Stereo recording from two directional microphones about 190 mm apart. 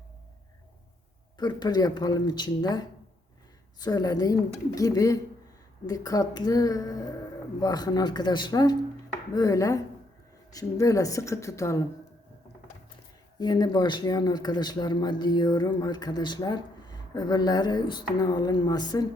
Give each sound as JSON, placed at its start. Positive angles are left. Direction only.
{"t": 1.4, "sound": "a woman's voice", "side_deg": 20}
{"t": 13.4, "sound": "speech", "side_deg": 20}